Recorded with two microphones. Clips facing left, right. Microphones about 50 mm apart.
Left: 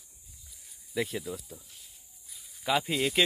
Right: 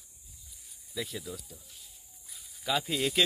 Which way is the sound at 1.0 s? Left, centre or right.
Left.